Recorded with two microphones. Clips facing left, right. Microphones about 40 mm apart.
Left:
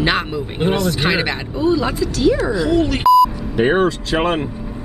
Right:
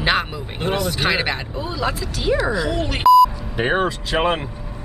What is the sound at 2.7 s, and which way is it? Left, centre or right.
Speech, centre.